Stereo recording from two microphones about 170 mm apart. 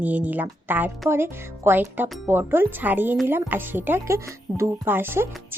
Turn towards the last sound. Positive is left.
turn(degrees=-15)  # may be behind; listen again after turning